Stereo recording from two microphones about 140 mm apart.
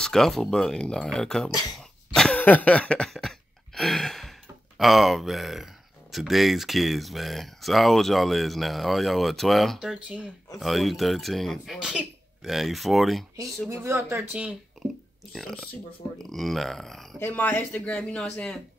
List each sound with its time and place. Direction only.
0.0 s speech: 5° left (ahead or behind)
2.1 s a sound: 5° left (ahead or behind)
6.1 s speech: centre (ahead or behind)
13.7 s speech: 20° right (ahead or behind)
14.3 s speech: 10° right (ahead or behind)
15.3 s speech: 5° left (ahead or behind)